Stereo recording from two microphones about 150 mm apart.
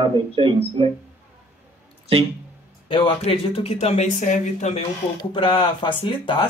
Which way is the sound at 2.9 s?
35° left (ahead or behind).